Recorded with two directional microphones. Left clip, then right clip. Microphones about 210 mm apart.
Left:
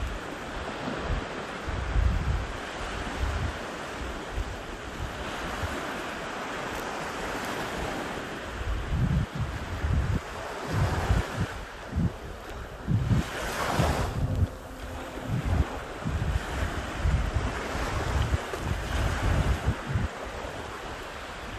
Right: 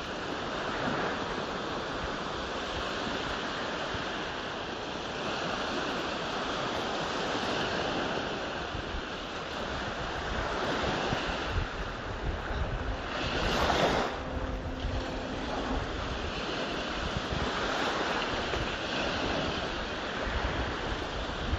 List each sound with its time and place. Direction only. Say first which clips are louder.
13.7 s waves: right 2 dB; 30° right (ahead or behind)